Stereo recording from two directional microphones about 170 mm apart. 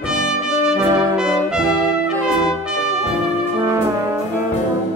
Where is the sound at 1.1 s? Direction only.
5° right (ahead or behind).